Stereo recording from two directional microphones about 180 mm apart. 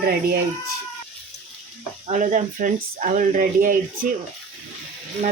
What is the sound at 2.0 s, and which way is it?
Speech, 45° right (ahead or behind).